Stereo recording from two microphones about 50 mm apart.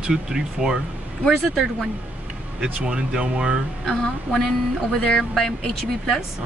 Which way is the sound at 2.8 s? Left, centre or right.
Centre.